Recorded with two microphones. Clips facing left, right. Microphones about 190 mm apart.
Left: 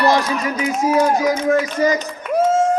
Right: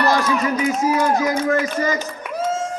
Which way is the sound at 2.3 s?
55° left (ahead or behind).